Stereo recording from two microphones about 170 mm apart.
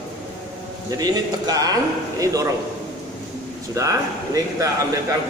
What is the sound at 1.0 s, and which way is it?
A man's voice, 20° right (ahead or behind).